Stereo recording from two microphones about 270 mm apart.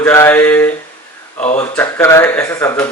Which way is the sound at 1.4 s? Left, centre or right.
Left.